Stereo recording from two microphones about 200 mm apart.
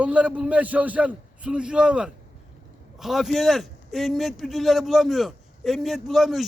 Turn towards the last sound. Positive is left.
turn(degrees=0)  # may be behind; listen again after turning